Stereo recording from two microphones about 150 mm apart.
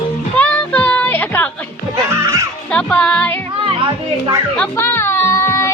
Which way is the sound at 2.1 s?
20° right (ahead or behind).